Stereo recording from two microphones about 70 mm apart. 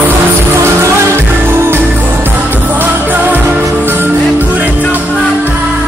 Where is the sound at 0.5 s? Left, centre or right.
Right.